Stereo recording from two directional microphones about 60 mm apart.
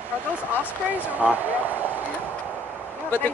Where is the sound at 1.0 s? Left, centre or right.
Right.